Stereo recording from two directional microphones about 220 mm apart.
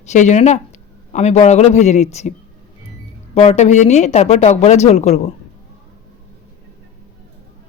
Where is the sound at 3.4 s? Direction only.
30° left (ahead or behind).